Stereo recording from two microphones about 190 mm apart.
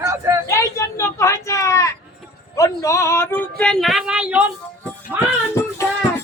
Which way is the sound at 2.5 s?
15° left (ahead or behind).